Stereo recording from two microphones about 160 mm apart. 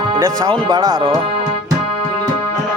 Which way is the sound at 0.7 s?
25° right (ahead or behind).